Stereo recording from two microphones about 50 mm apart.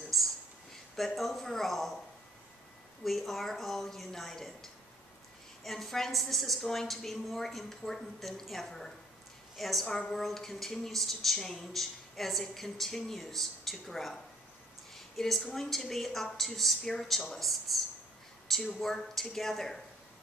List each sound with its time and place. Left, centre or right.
0.1 s a sound: centre
0.9 s a woman's voice: centre
3.0 s a woman's voice: centre